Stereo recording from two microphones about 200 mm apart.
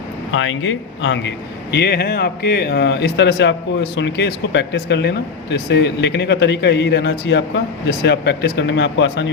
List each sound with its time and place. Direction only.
0.3 s a man's voice: 70° left (ahead or behind)
1.7 s speech: 55° left (ahead or behind)